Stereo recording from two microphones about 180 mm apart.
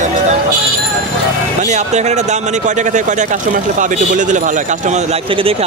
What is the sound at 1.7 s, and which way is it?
A man's voice, 40° right (ahead or behind).